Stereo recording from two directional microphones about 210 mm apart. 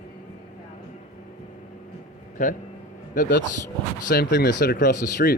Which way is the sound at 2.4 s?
35° left (ahead or behind).